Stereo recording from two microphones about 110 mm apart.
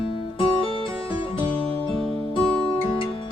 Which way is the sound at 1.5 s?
10° left (ahead or behind).